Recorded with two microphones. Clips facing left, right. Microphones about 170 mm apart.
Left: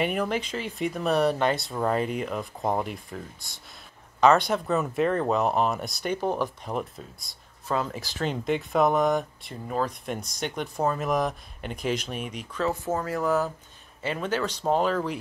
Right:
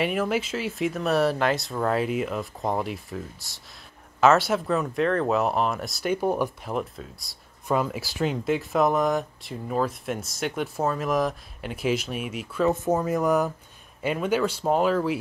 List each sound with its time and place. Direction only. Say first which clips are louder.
0.0 s speech: right 2 dB; centre (ahead or behind)
7.6 s speech: right 3 dB; 15° right (ahead or behind)
12.6 s speech: right 5 dB; 20° right (ahead or behind)